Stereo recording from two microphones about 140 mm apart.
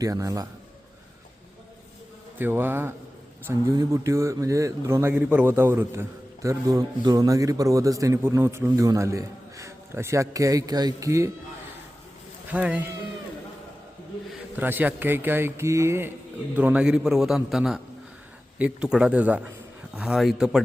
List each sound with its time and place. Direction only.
0.0 s speech: 25° right (ahead or behind)
2.4 s speech: 15° right (ahead or behind)
12.5 s speech: 10° right (ahead or behind)
14.5 s a man's voice: 15° right (ahead or behind)